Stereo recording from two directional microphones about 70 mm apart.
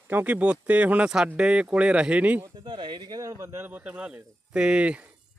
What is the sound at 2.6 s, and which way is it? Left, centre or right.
Speech, right.